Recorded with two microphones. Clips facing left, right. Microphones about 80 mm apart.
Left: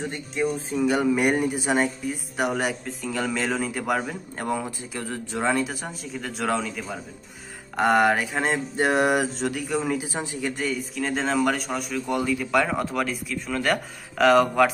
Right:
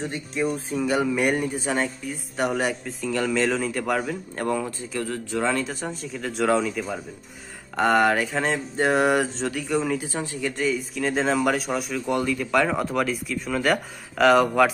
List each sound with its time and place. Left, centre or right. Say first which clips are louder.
0.3 s a man's voice: even; centre
2.0 s speech: even; centre
10.1 s a man's voice: right 1 dB; centre
10.6 s speech: right 6 dB; centre